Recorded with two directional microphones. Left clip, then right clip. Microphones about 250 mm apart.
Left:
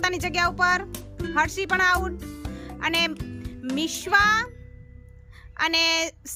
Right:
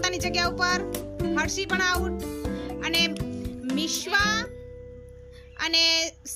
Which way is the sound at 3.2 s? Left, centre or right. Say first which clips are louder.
Right 5 dB; centre.